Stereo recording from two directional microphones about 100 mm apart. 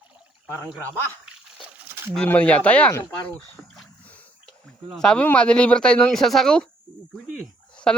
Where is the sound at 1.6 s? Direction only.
25° right (ahead or behind).